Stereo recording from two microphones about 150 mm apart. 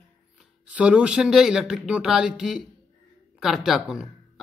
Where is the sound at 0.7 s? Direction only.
5° right (ahead or behind).